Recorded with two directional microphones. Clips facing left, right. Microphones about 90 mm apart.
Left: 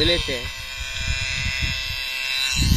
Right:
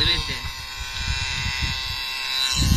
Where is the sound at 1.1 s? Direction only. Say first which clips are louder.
Even; 10° right (ahead or behind).